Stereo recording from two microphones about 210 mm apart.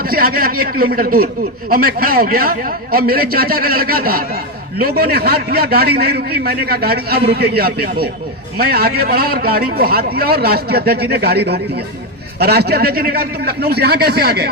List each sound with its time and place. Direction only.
0.1 s a man's voice: 45° right (ahead or behind)